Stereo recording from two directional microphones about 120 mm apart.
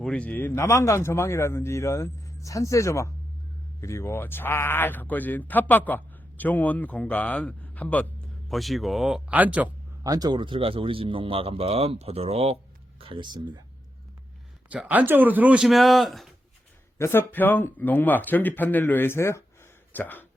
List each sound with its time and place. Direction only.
0.0 s a man's voice: 10° left (ahead or behind)
8.4 s speech: centre (ahead or behind)
9.3 s speech: 10° right (ahead or behind)
10.0 s speech: 30° right (ahead or behind); by 12.5 s 55° right (ahead or behind)
13.0 s speech: 45° right (ahead or behind)
14.7 s speech: 15° right (ahead or behind)
15.6 s speech: centre (ahead or behind)
17.0 s a man's voice: 20° left (ahead or behind)